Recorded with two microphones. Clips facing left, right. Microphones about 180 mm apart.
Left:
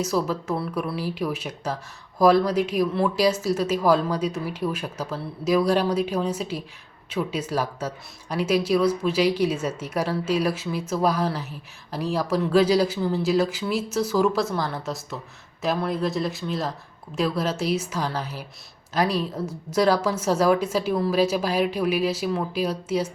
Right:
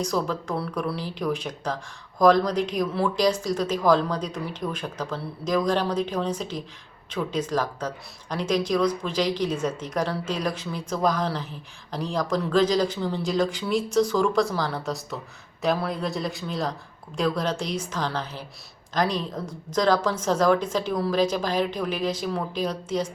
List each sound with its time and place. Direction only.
0.0 s a woman's voice: 5° left (ahead or behind)